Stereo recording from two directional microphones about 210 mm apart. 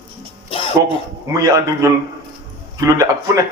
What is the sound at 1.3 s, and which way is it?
A man's voice, 15° right (ahead or behind).